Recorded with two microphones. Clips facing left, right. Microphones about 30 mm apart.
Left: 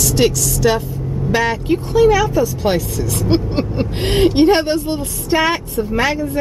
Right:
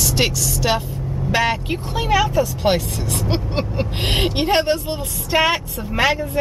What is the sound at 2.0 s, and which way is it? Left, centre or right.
Speech, right.